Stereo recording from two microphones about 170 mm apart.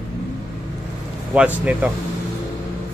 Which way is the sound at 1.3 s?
5° right (ahead or behind).